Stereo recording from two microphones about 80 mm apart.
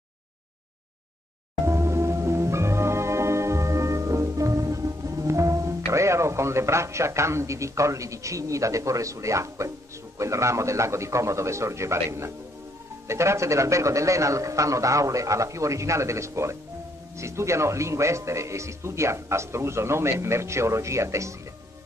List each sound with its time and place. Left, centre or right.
1.7 s music: right
5.9 s speech: right